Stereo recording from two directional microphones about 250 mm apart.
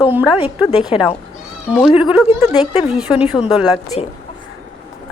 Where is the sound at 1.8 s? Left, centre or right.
Centre.